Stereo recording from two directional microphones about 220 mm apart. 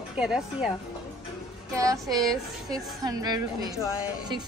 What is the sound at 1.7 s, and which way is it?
A woman's voice, 15° right (ahead or behind).